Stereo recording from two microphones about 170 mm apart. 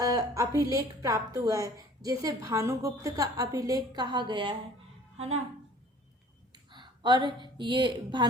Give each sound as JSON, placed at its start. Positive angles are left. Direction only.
{"t": 0.0, "sound": "a woman's voice", "side_deg": -20}
{"t": 5.1, "sound": "speech", "side_deg": -40}
{"t": 6.5, "sound": "a woman's voice", "side_deg": -25}